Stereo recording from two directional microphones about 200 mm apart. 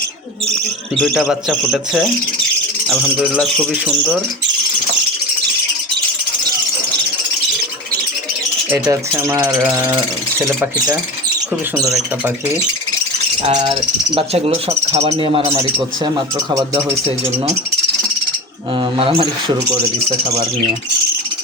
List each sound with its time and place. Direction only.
0.9 s a man's voice: 5° left (ahead or behind)
2.8 s a sound: centre (ahead or behind)
3.3 s a man's voice: centre (ahead or behind)
8.9 s speech: 15° right (ahead or behind)
13.4 s a sound: 30° right (ahead or behind)
14.1 s speech: 30° right (ahead or behind)
18.8 s speech: 25° right (ahead or behind)